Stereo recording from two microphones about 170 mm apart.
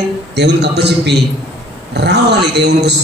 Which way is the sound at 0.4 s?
80° right.